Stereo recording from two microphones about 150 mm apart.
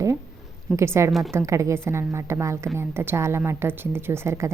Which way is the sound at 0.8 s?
20° right (ahead or behind).